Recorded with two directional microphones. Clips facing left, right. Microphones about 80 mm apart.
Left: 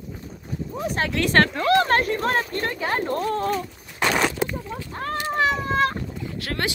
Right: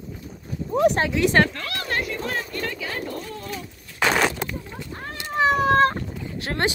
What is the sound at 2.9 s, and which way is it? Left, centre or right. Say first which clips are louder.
Speech: left 7 dB; left.